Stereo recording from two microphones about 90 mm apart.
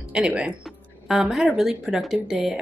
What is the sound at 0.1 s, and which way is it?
Speech, 15° right (ahead or behind).